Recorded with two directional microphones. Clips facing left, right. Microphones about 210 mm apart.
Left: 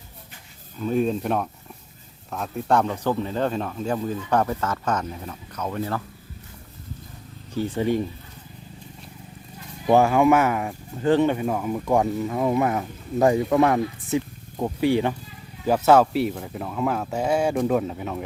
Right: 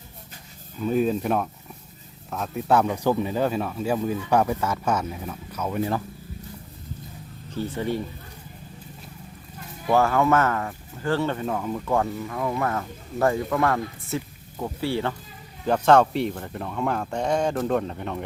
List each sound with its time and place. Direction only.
0.8 s speech: 5° right (ahead or behind)
7.5 s speech: 15° left (ahead or behind)
9.9 s speech: 15° left (ahead or behind)